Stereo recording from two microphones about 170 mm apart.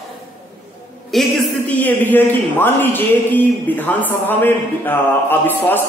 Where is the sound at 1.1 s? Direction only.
Centre (ahead or behind).